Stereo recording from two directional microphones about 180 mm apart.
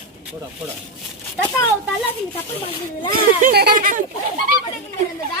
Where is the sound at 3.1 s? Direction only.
60° right (ahead or behind).